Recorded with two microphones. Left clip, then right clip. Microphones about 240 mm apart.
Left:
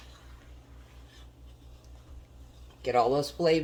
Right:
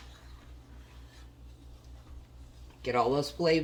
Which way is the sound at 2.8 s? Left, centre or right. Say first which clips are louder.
Left 3 dB; centre.